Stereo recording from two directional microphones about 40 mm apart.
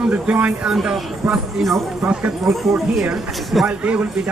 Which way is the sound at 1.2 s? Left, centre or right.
Centre.